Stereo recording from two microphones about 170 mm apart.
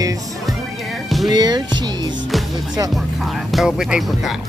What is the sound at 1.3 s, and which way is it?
Speech, 25° right (ahead or behind).